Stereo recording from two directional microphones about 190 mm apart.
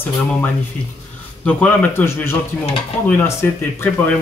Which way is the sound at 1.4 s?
5° left (ahead or behind).